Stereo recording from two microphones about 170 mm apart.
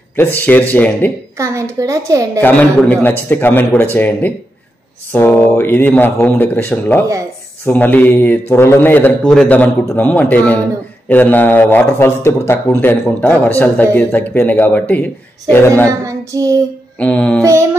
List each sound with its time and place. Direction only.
0.5 s speech: 10° left (ahead or behind)
1.4 s a child's voice: 15° right (ahead or behind)
2.4 s speech: 10° left (ahead or behind)
16.0 s a child's voice: 20° right (ahead or behind)
17.0 s speech: 5° left (ahead or behind)
17.4 s music: 15° right (ahead or behind)